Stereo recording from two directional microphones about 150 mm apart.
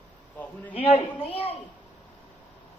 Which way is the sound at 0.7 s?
40° left (ahead or behind).